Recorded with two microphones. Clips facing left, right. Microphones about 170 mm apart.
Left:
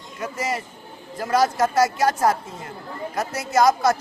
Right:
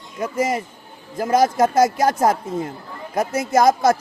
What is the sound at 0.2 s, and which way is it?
A man's voice, 45° right (ahead or behind).